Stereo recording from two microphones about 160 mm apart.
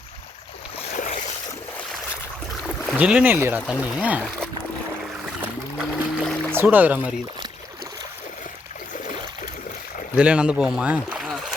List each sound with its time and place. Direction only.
0.9 s boat: 55° left (ahead or behind)
2.6 s speech: 5° right (ahead or behind)
5.4 s boat: 5° right (ahead or behind)
6.5 s speech: 10° right (ahead or behind)
10.2 s speech: 5° right (ahead or behind)